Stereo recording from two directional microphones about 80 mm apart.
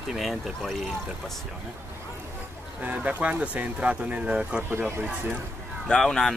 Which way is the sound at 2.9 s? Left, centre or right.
Centre.